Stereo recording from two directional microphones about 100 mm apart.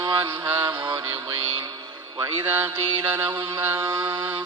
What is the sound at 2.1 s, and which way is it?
Mantra, 40° right (ahead or behind).